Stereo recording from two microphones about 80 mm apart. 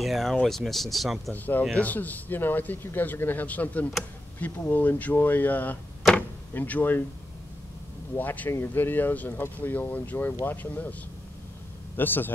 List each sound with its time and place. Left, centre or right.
0.0 s speech: centre
1.3 s a man's voice: left
6.1 s door: centre
8.2 s a man's voice: left
12.0 s a man's voice: left